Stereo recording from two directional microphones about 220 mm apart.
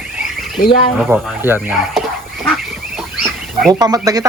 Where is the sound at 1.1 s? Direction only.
5° right (ahead or behind).